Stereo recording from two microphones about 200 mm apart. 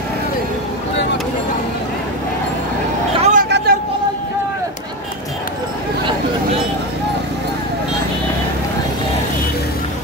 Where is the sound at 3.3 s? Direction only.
55° right (ahead or behind).